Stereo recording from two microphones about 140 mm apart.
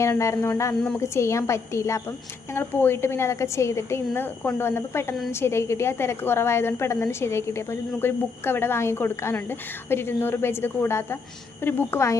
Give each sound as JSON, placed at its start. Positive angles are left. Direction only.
{"t": 0.0, "sound": "a woman's voice", "side_deg": 20}